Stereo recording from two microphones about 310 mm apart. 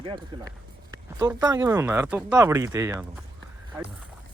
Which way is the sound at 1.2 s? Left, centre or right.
Centre.